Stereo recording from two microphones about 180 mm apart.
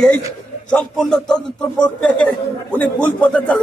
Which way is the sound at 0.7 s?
5° left (ahead or behind).